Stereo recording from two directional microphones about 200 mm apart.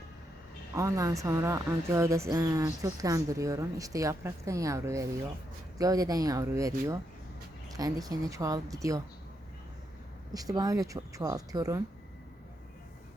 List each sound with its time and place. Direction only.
0.8 s speech: 15° right (ahead or behind)
10.3 s speech: 20° right (ahead or behind)